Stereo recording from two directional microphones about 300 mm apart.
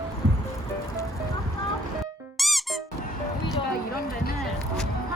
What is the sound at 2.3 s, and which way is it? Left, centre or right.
Music, centre.